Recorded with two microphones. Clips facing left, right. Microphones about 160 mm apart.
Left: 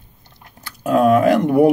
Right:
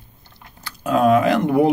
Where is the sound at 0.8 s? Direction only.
55° left (ahead or behind).